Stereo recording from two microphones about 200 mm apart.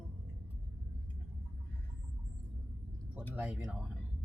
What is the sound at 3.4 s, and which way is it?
Speech, 5° right (ahead or behind).